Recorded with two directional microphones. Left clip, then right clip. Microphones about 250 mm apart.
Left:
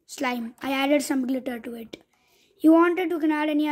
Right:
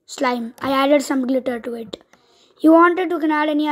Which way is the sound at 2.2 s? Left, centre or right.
Left.